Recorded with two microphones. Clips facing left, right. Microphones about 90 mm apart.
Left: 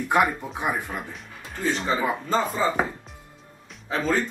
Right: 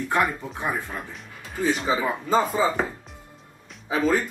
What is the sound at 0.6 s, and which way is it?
Speech, 15° left (ahead or behind).